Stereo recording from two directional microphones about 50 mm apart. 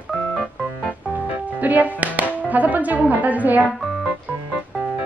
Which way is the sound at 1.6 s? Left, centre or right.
Right.